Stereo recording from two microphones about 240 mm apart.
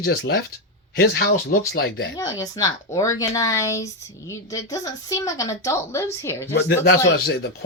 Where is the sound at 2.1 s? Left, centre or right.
Centre.